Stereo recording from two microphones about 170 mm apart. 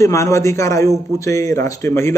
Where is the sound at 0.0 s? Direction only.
15° left (ahead or behind).